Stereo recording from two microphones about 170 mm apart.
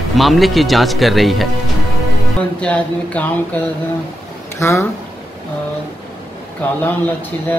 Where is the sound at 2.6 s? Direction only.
5° left (ahead or behind).